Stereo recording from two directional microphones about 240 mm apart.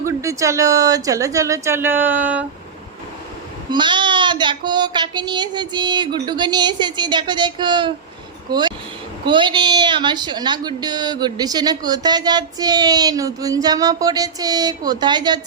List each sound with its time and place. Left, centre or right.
0.0 s a woman's voice: centre
3.7 s a woman's voice: centre